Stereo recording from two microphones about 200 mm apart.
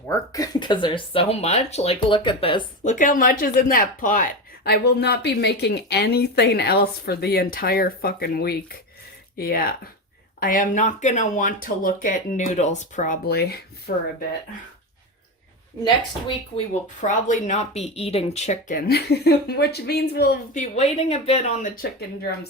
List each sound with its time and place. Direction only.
0.1 s speech: 20° left (ahead or behind)
2.8 s speech: 40° left (ahead or behind)
17.0 s speech: 40° left (ahead or behind)
20.6 s speech: 35° left (ahead or behind)